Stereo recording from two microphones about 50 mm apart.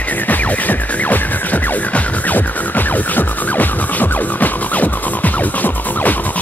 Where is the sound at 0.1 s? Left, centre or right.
Left.